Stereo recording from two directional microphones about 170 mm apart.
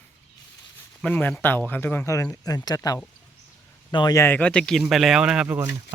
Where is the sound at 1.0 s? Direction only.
10° left (ahead or behind).